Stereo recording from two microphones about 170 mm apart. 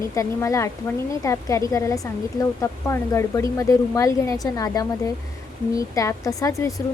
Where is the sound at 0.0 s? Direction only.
20° left (ahead or behind).